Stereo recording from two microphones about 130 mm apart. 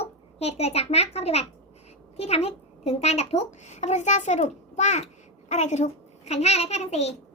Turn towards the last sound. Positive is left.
turn(degrees=55)  # may be behind; listen again after turning